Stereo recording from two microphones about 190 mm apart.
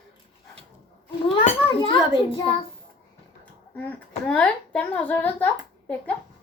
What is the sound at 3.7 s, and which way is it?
A child's voice, 10° left (ahead or behind).